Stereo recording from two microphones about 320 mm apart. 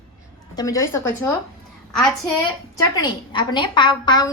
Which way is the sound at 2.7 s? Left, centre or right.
Centre.